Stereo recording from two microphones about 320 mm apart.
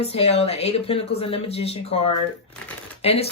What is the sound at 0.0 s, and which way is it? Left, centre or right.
Speech, centre.